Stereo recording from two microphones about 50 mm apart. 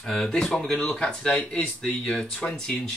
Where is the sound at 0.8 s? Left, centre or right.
Centre.